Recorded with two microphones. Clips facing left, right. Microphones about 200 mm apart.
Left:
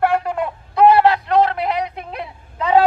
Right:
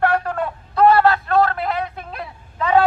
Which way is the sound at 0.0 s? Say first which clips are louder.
Left 1 dB; 10° left (ahead or behind).